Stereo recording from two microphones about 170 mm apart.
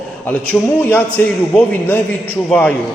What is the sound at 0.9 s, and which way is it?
A man's voice, 10° left (ahead or behind).